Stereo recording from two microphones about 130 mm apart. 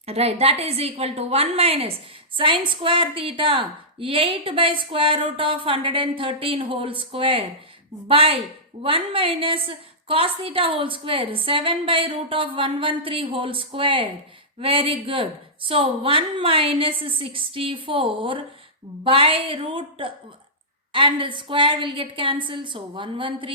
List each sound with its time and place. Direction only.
0.0 s a woman's voice: 50° right (ahead or behind)